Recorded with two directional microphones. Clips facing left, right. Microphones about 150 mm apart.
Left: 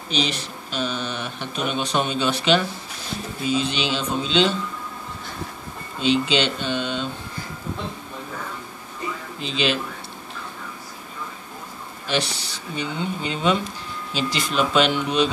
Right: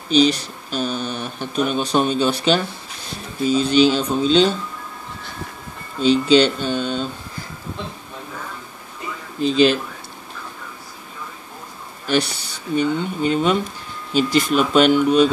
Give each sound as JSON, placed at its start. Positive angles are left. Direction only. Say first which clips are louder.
{"t": 0.1, "sound": "speech", "louder": "right 10 dB", "side_deg": -35}
{"t": 5.9, "sound": "speech", "louder": "right 6 dB", "side_deg": -40}
{"t": 9.4, "sound": "speech", "louder": "right 9 dB", "side_deg": -45}
{"t": 12.1, "sound": "speech", "louder": "right 5 dB", "side_deg": -50}